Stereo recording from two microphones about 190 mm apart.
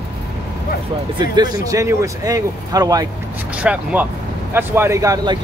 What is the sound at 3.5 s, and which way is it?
Speech, 5° right (ahead or behind).